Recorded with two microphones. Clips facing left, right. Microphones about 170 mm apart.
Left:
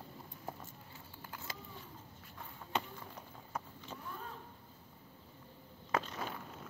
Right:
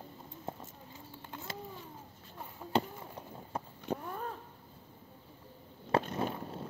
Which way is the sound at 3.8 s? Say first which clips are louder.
Right 9 dB; 55° right (ahead or behind).